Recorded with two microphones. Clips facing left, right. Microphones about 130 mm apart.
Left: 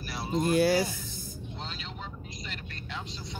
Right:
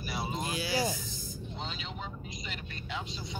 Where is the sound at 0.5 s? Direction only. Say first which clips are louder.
Left 11 dB; 55° left (ahead or behind).